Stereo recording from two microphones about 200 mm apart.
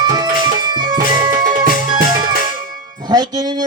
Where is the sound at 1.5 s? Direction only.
45° right (ahead or behind).